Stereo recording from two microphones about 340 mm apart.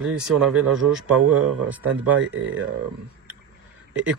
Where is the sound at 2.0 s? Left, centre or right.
Right.